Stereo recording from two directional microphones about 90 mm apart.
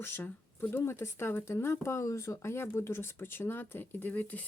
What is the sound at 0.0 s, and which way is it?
Speech, 25° left (ahead or behind).